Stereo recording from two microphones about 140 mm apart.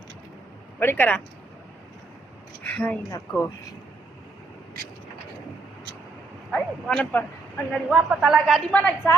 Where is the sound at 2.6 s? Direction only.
10° left (ahead or behind).